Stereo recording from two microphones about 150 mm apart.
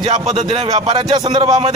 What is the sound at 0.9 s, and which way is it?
Speech, 30° right (ahead or behind).